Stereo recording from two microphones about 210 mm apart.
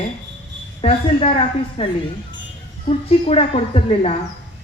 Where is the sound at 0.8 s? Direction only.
30° left (ahead or behind).